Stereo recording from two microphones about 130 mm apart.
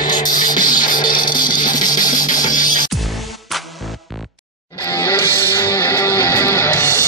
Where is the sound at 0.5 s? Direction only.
90° left.